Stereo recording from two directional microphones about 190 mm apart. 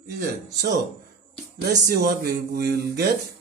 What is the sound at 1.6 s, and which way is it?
Speech, 60° right (ahead or behind).